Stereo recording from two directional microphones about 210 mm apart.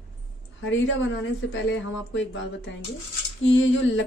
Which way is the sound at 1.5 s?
60° left (ahead or behind).